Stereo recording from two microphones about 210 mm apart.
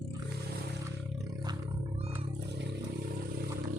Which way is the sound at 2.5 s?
55° right (ahead or behind).